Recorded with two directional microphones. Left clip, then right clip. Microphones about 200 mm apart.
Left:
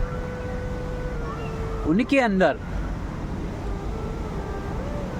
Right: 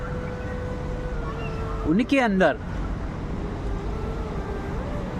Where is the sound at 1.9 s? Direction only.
Centre (ahead or behind).